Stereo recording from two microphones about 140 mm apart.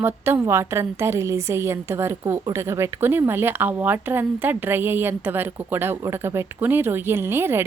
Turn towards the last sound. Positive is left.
turn(degrees=-15)  # may be behind; listen again after turning